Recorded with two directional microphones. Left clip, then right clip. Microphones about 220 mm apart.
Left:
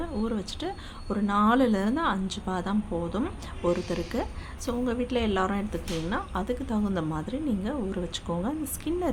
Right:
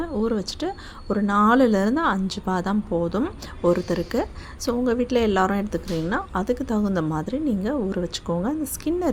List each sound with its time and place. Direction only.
0.0 s a woman's voice: 25° right (ahead or behind)